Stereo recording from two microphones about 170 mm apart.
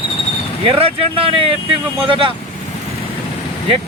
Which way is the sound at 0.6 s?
30° right (ahead or behind).